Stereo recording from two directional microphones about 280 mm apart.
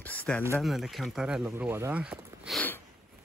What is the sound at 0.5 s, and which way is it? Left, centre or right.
Speech, centre.